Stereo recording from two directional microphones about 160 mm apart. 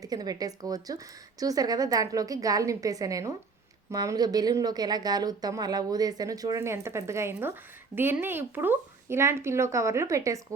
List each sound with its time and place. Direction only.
0.0 s speech: 25° right (ahead or behind)